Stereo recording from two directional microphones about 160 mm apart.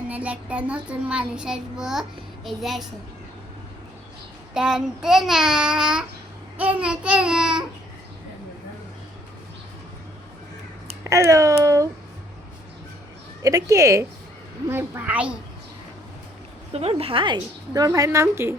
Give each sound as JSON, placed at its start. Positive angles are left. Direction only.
{"t": 0.1, "sound": "a child's voice", "side_deg": -10}
{"t": 4.5, "sound": "a child's voice", "side_deg": -5}
{"t": 11.0, "sound": "a sound", "side_deg": -20}
{"t": 13.4, "sound": "a woman's voice", "side_deg": -20}
{"t": 16.7, "sound": "a woman's voice", "side_deg": -40}